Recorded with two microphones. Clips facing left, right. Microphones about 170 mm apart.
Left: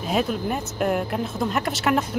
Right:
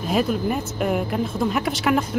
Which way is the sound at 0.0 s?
Centre (ahead or behind).